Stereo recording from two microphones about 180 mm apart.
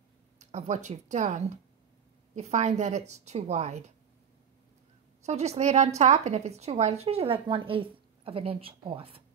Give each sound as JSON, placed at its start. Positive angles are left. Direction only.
{"t": 0.4, "sound": "a woman's voice", "side_deg": -40}
{"t": 5.2, "sound": "a woman's voice", "side_deg": -35}